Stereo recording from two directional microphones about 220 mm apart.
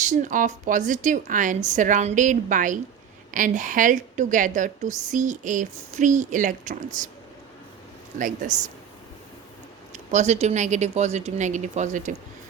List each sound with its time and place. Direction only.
0.1 s a woman's voice: 35° right (ahead or behind)
8.2 s a woman's voice: 35° right (ahead or behind)
9.9 s a woman's voice: 30° right (ahead or behind)